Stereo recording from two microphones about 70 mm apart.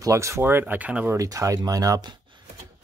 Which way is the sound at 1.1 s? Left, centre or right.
Right.